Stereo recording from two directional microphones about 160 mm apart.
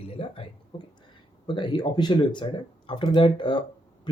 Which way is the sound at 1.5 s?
30° left (ahead or behind).